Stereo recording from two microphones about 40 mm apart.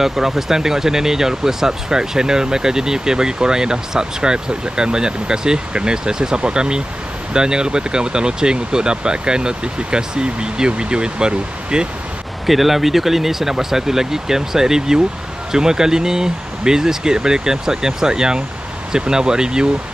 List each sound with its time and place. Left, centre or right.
0.0 s speech: centre
12.4 s speech: centre